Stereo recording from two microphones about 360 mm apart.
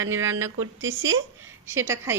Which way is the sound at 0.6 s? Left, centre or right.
Right.